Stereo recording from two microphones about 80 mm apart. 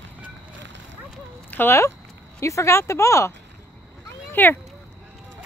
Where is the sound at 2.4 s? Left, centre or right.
Left.